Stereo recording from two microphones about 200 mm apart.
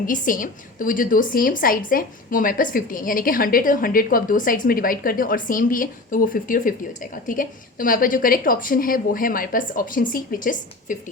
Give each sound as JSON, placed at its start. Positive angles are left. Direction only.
{"t": 0.0, "sound": "a woman's voice", "side_deg": 40}